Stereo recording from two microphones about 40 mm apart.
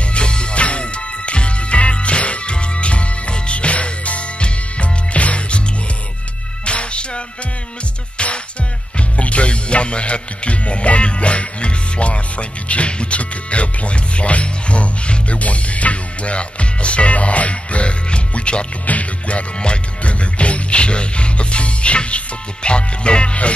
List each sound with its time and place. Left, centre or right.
0.1 s music: left
6.6 s music: left